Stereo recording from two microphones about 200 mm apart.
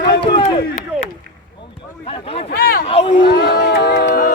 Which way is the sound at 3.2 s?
55° left (ahead or behind).